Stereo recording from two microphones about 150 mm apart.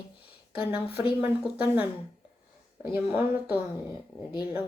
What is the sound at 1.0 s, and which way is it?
Speech, 20° right (ahead or behind).